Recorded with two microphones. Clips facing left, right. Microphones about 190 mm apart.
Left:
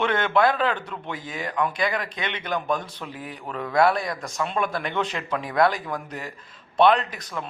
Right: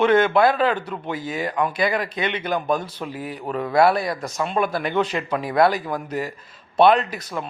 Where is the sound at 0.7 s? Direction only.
40° right (ahead or behind).